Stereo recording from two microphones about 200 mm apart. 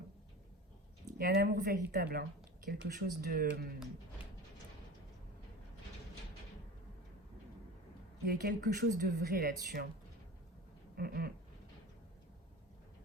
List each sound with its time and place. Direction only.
1.2 s a woman's voice: 50° right (ahead or behind)
8.3 s a woman's voice: 50° right (ahead or behind)
10.9 s a woman's voice: 50° right (ahead or behind)